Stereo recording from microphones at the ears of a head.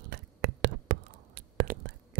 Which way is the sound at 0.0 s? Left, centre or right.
Right.